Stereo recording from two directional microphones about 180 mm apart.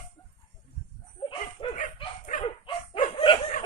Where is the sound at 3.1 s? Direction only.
25° left (ahead or behind).